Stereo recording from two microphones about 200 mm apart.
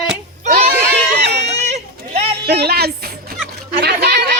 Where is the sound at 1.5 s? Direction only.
35° right (ahead or behind).